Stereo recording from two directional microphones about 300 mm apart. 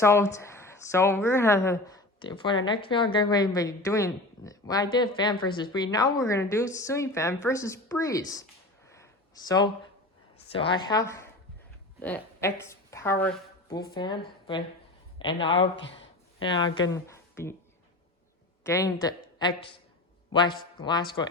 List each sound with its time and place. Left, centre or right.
0.0 s a woman's voice: centre
8.9 s a sound: centre
10.5 s a woman's voice: centre
15.7 s speech: left
16.4 s speech: centre
18.6 s a woman's voice: centre